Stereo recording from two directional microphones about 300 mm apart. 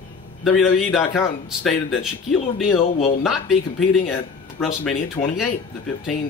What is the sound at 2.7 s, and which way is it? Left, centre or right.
Speech, centre.